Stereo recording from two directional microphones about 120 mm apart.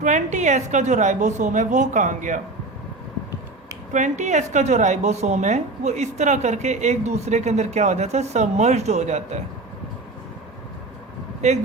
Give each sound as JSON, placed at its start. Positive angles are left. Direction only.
{"t": 0.0, "sound": "a woman's voice", "side_deg": -90}
{"t": 3.9, "sound": "a woman's voice", "side_deg": -85}
{"t": 11.4, "sound": "a woman's voice", "side_deg": -70}